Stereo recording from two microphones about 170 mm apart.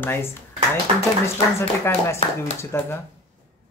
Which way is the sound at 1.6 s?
15° left (ahead or behind).